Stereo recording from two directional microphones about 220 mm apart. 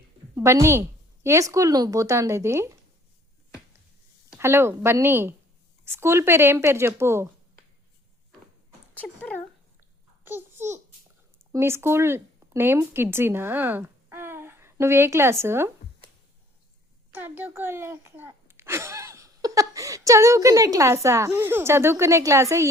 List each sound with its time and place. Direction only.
0.3 s speech: 10° right (ahead or behind)
4.3 s speech: 10° right (ahead or behind)
9.0 s a sound: 5° left (ahead or behind)
10.2 s babbling: 10° right (ahead or behind)
11.5 s speech: 10° right (ahead or behind)
17.2 s a child's voice: 10° right (ahead or behind)